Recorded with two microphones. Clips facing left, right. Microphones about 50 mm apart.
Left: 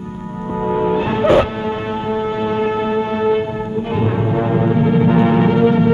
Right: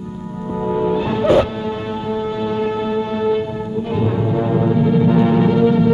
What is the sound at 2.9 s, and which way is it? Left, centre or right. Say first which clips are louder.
Music: left 1 dB; left.